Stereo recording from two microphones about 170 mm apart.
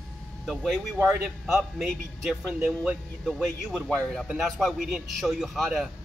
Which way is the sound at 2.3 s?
5° right (ahead or behind).